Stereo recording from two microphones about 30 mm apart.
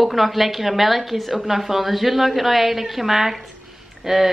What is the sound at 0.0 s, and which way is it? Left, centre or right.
A woman's voice, centre.